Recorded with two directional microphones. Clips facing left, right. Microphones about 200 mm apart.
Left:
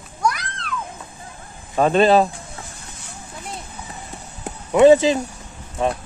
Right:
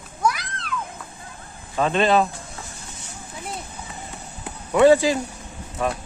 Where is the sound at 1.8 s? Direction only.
40° left (ahead or behind).